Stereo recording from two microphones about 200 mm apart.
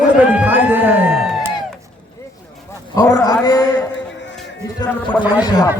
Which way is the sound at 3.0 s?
15° left (ahead or behind).